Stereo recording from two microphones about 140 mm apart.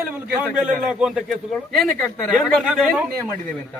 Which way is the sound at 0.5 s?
5° right (ahead or behind).